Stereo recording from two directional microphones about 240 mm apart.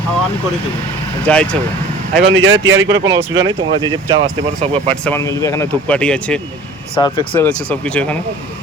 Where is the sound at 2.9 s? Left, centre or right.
Centre.